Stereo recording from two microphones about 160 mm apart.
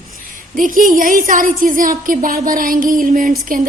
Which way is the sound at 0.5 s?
55° right (ahead or behind).